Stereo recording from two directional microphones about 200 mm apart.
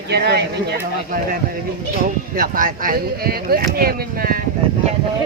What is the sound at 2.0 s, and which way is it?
Speech, 45° right (ahead or behind).